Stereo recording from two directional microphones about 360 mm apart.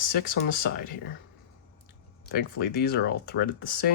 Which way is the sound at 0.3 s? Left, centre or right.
Left.